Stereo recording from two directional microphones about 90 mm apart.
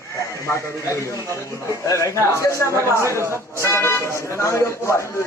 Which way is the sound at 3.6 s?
30° left (ahead or behind).